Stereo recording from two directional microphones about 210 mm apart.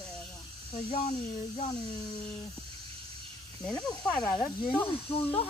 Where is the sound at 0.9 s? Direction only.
30° left (ahead or behind).